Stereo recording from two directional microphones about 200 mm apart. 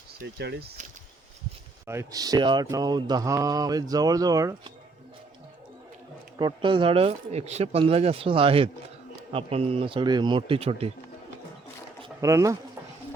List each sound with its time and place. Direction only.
0.2 s speech: 55° right (ahead or behind)
1.9 s speech: 15° right (ahead or behind)
6.4 s speech: 25° right (ahead or behind)
12.0 s speech: 15° right (ahead or behind)